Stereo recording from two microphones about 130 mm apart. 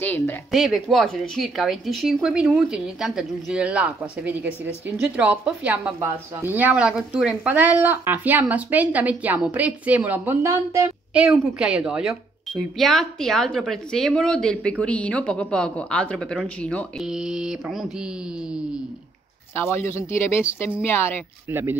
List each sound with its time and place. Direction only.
0.0 s a woman's voice: 15° left (ahead or behind)
0.5 s speech: centre (ahead or behind); by 10.9 s 20° right (ahead or behind)
11.5 s speech: 5° right (ahead or behind)
17.0 s speech: 5° right (ahead or behind)
19.5 s a woman's voice: 20° left (ahead or behind)
21.5 s speech: 15° right (ahead or behind)